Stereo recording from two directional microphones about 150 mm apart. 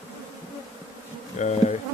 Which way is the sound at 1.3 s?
50° left (ahead or behind).